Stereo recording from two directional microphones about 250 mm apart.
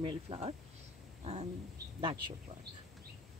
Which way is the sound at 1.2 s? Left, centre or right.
Right.